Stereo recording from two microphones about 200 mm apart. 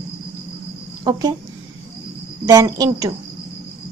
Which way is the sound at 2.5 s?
15° right (ahead or behind).